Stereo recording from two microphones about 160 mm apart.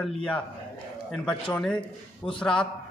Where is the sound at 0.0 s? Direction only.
5° left (ahead or behind).